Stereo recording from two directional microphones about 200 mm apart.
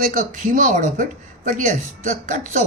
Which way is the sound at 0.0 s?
45° right (ahead or behind).